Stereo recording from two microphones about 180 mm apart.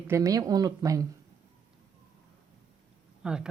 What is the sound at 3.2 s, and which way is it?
Speech, 5° right (ahead or behind).